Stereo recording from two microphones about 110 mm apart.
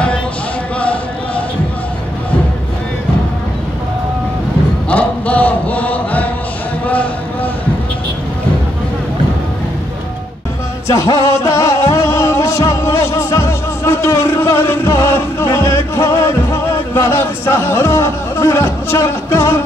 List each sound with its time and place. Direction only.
0.7 s a sound: 10° left (ahead or behind)
4.8 s chant: 15° left (ahead or behind)
10.9 s music: 30° left (ahead or behind)